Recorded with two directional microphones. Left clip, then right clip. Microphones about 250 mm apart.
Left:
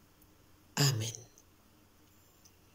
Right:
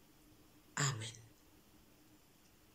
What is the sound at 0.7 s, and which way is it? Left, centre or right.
Speech, centre.